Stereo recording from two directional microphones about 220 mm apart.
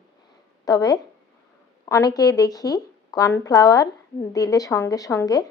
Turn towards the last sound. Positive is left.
turn(degrees=15)  # may be behind; listen again after turning